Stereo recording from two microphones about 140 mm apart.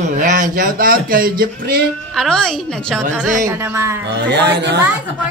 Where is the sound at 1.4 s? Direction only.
90° right.